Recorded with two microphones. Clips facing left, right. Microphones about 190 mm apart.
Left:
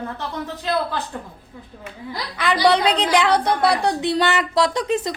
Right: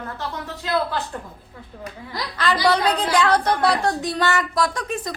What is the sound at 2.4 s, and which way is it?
A woman's voice, 15° left (ahead or behind).